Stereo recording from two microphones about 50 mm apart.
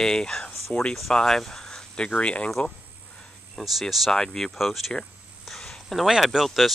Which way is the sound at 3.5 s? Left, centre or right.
Centre.